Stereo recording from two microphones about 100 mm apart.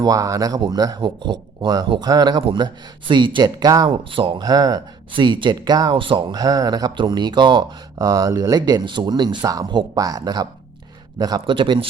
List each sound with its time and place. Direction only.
0.0 s speech: 40° right (ahead or behind)
3.9 s speech: 60° right (ahead or behind)
4.4 s speech: 40° right (ahead or behind)
5.1 s speech: 55° right (ahead or behind)
5.9 s speech: 60° right (ahead or behind); by 11.4 s 40° right (ahead or behind)
11.4 s speech: 55° right (ahead or behind)